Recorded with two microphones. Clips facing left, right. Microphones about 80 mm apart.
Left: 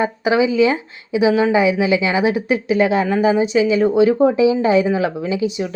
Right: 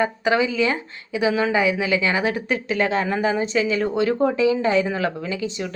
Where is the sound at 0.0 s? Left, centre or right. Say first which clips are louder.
Left 4 dB; centre.